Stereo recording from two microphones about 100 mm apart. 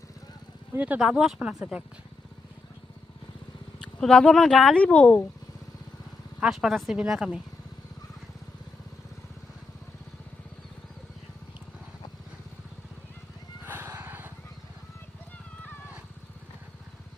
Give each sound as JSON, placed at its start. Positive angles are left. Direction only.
{"t": 0.8, "sound": "speech", "side_deg": -10}
{"t": 3.8, "sound": "speech", "side_deg": 5}
{"t": 6.4, "sound": "a woman's voice", "side_deg": -5}
{"t": 13.7, "sound": "music", "side_deg": -20}